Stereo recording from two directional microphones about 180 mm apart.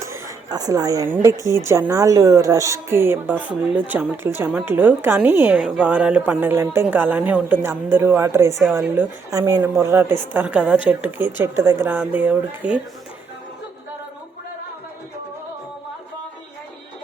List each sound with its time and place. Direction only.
0.0 s a woman's voice: 20° right (ahead or behind)